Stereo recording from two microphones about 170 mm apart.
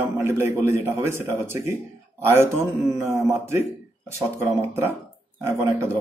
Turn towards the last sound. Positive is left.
turn(degrees=-15)  # may be behind; listen again after turning